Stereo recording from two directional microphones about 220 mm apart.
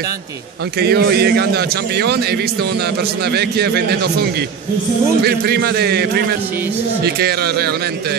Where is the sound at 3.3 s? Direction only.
45° right (ahead or behind).